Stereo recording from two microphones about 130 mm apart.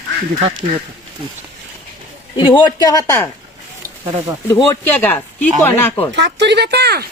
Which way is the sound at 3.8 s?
90° right.